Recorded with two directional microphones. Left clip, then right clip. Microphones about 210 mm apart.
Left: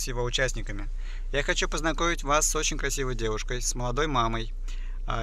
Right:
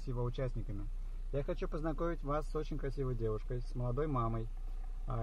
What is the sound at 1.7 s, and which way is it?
Speech, 25° left (ahead or behind).